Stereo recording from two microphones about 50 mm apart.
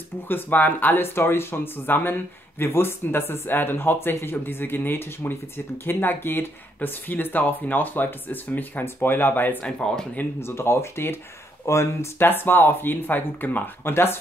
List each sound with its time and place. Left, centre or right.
0.3 s speech: left
9.8 s speech: centre
10.4 s speech: left
11.6 s speech: left
12.2 s speech: left